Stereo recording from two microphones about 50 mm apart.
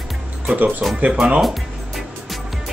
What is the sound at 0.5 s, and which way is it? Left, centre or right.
Throat clearing, right.